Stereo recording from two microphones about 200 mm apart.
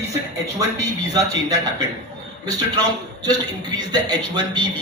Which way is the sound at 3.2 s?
20° right (ahead or behind).